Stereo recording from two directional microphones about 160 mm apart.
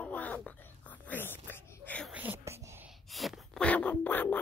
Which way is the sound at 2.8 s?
Centre (ahead or behind).